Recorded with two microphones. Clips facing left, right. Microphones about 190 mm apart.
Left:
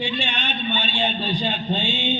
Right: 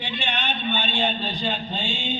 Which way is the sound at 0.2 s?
60° right (ahead or behind).